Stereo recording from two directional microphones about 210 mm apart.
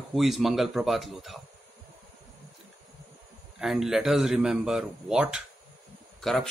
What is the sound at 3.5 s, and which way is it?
Speech, centre (ahead or behind).